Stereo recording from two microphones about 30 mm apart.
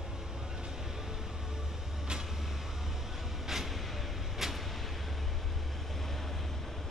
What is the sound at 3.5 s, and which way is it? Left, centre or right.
Vehicle, centre.